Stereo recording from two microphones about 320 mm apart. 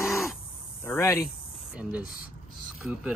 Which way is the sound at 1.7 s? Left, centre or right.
Centre.